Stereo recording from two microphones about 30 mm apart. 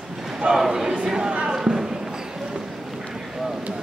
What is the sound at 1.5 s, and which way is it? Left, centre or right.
Basketball bounce, centre.